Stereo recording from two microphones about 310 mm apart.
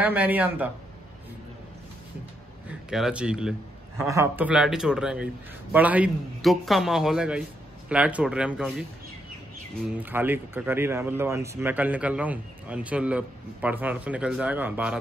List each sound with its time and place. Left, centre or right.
0.0 s speech: centre
2.7 s speech: centre
9.8 s speech: centre